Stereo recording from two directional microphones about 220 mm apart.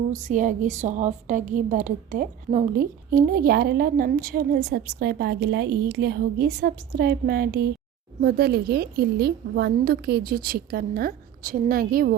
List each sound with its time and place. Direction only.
0.1 s a woman's voice: 35° right (ahead or behind)